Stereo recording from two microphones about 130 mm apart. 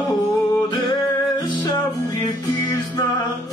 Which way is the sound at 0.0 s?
30° left (ahead or behind).